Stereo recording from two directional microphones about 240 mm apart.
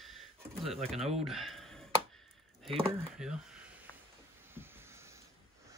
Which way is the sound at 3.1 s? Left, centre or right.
Centre.